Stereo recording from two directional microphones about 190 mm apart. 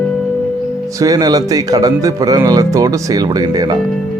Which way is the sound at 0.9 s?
20° right (ahead or behind).